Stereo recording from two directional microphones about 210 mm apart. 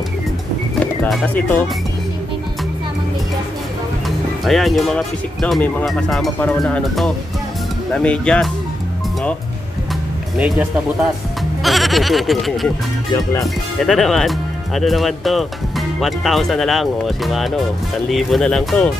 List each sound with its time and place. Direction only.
1.1 s speech: 5° left (ahead or behind)
4.5 s speech: centre (ahead or behind)
10.3 s speech: 5° right (ahead or behind)
13.1 s speech: 15° left (ahead or behind)
13.7 s speech: centre (ahead or behind)